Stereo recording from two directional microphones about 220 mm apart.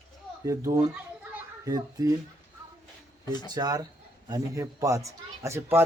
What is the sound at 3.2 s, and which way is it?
Speech, 20° left (ahead or behind).